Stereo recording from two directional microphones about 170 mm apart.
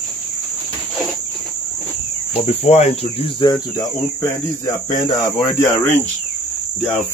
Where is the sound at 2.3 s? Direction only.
35° left (ahead or behind).